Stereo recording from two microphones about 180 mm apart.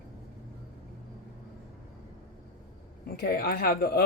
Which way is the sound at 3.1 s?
60° left (ahead or behind).